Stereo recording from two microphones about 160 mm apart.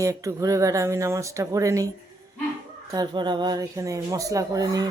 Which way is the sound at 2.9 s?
25° right (ahead or behind).